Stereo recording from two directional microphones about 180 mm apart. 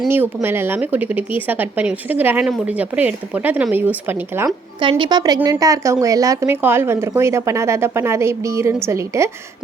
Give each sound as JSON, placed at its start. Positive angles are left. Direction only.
{"t": 0.1, "sound": "speech", "side_deg": -10}
{"t": 4.8, "sound": "speech", "side_deg": -25}